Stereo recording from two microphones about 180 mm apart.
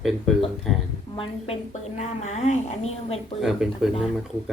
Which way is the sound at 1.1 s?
30° left (ahead or behind).